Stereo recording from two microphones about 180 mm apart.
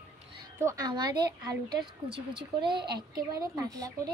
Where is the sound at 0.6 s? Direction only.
20° right (ahead or behind).